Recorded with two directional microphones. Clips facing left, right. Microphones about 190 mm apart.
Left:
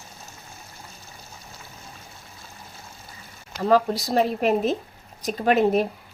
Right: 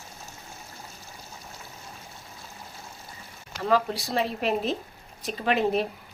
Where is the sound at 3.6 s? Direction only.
40° left (ahead or behind).